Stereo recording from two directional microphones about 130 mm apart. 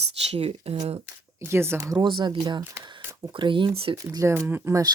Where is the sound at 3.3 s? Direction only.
40° right (ahead or behind).